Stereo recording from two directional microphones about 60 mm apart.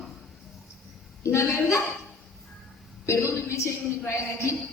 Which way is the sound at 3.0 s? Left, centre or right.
Left.